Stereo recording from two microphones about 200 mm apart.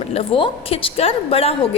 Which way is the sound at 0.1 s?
30° left (ahead or behind).